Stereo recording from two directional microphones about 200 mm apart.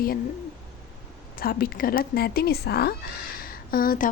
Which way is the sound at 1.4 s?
45° left (ahead or behind).